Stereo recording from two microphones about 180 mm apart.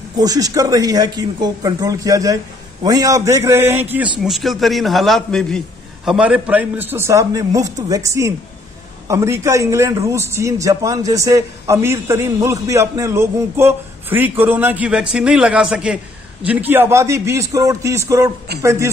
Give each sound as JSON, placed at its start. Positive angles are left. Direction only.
{"t": 0.2, "sound": "speech", "side_deg": -20}
{"t": 4.2, "sound": "a man's voice", "side_deg": 0}